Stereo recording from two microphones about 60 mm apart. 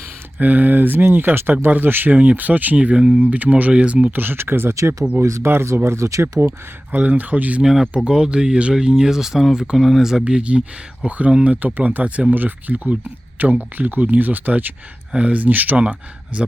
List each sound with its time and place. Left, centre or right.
0.3 s speech: right
3.2 s speech: right
4.1 s speech: right
5.2 s speech: right
6.9 s speech: right
7.6 s speech: centre
10.2 s speech: centre